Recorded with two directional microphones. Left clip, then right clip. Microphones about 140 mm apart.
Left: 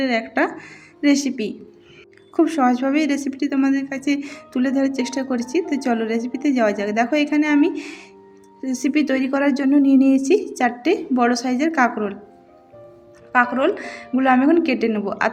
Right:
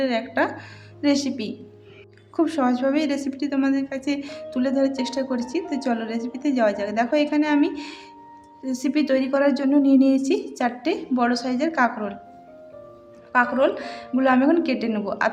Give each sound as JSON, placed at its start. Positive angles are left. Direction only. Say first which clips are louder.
{"t": 0.0, "sound": "a woman's voice", "louder": "left 2 dB", "side_deg": 15}
{"t": 13.3, "sound": "a woman's voice", "louder": "left 2 dB", "side_deg": 15}